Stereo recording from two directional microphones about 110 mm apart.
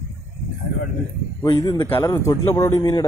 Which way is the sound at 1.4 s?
40° left (ahead or behind).